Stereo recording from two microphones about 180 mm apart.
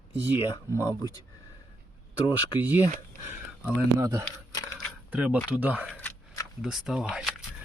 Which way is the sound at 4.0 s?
20° right (ahead or behind).